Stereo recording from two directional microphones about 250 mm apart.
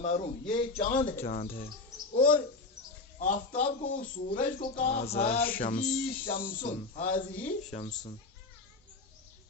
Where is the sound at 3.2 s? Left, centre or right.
Left.